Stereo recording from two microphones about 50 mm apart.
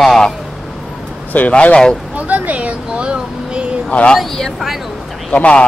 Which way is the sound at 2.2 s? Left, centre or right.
Right.